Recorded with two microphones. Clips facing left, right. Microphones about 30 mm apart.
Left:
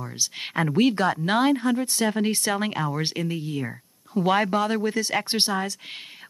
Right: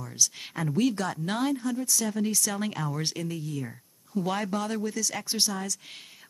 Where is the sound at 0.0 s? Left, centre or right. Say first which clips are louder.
Even; left.